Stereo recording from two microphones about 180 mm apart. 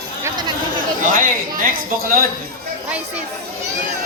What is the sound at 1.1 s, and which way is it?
Speech, 50° right (ahead or behind).